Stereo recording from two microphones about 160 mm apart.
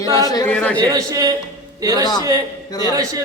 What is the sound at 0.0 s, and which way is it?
Speech, 20° left (ahead or behind).